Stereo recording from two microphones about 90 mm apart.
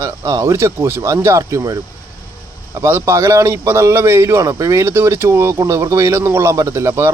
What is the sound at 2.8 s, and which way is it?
A man's voice, 30° right (ahead or behind).